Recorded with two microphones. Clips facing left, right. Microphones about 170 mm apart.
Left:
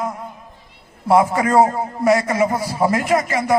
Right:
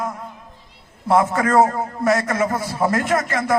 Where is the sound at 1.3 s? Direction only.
5° left (ahead or behind).